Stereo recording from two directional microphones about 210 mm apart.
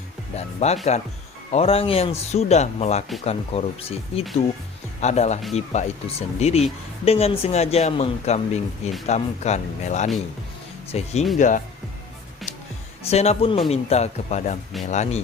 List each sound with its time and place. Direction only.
0.3 s speech: 30° left (ahead or behind)
13.1 s speech: 30° left (ahead or behind)